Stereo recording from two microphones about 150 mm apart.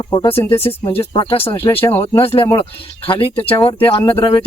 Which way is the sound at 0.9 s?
35° left (ahead or behind).